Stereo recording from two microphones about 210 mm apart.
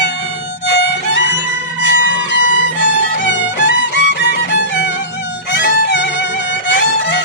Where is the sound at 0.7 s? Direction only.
55° left (ahead or behind).